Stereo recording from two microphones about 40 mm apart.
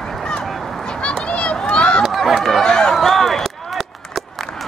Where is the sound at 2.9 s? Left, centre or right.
Centre.